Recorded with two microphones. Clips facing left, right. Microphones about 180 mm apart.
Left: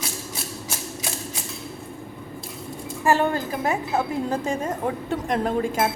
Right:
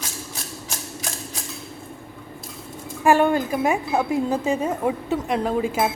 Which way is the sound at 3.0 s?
15° right (ahead or behind).